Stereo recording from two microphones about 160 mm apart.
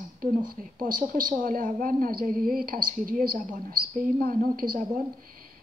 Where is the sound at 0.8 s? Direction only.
60° right (ahead or behind).